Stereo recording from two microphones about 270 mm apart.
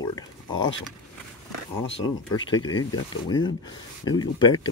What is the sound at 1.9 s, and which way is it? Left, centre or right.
Speech, left.